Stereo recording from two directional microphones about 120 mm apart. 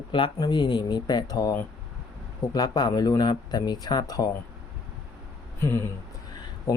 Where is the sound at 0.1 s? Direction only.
40° left (ahead or behind).